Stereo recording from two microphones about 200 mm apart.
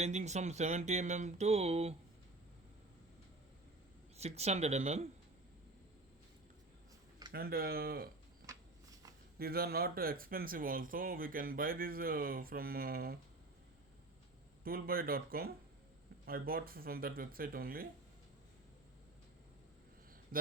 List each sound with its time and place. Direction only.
0.0 s speech: 35° right (ahead or behind)
4.2 s speech: 30° right (ahead or behind)
7.3 s speech: 50° right (ahead or behind)
9.4 s speech: 50° right (ahead or behind)
14.6 s speech: 45° right (ahead or behind)
20.3 s speech: 45° right (ahead or behind)